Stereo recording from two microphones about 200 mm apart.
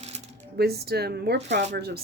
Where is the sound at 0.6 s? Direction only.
55° right (ahead or behind).